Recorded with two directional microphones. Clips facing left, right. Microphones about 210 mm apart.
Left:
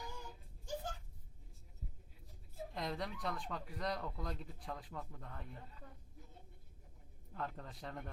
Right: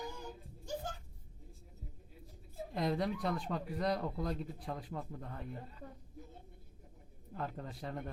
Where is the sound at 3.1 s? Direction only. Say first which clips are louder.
Right 6 dB; 30° right (ahead or behind).